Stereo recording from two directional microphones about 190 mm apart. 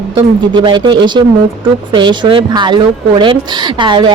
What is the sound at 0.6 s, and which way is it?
A woman's voice, 25° right (ahead or behind).